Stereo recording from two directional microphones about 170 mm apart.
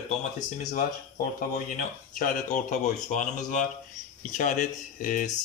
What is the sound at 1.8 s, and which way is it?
Speech, 50° left (ahead or behind).